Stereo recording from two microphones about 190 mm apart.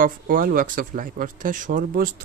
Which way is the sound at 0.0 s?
50° right (ahead or behind).